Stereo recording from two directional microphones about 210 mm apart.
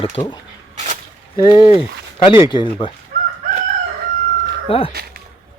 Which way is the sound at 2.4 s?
20° left (ahead or behind).